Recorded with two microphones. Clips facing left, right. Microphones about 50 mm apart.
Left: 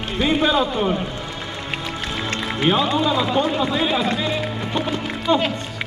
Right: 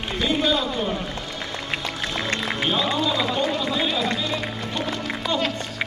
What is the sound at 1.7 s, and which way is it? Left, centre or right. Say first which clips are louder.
Music: left 3 dB; left.